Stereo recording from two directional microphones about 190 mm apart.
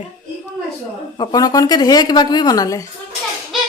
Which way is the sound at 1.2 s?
20° left (ahead or behind).